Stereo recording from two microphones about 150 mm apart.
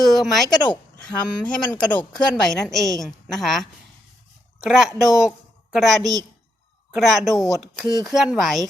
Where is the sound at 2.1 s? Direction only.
5° left (ahead or behind).